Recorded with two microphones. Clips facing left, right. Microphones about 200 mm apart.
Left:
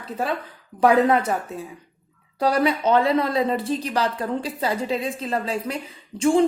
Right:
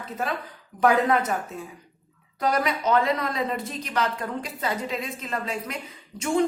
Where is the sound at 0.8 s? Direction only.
30° left (ahead or behind).